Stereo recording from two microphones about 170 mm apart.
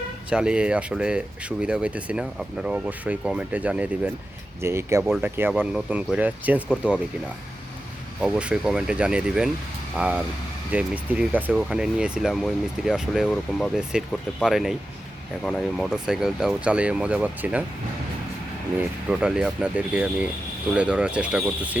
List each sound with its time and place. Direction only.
0.3 s speech: 5° right (ahead or behind)
8.2 s speech: 5° right (ahead or behind)
19.2 s speech: 5° right (ahead or behind)